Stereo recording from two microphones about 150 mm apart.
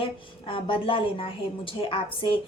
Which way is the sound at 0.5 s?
35° left (ahead or behind).